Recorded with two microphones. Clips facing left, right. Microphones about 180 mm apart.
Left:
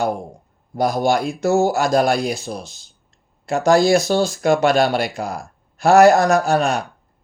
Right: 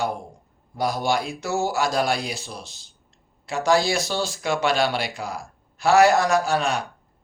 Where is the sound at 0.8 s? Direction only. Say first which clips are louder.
Left 6 dB; 45° left (ahead or behind).